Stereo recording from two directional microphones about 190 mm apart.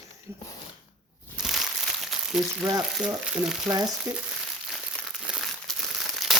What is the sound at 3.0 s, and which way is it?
Speech, 5° right (ahead or behind).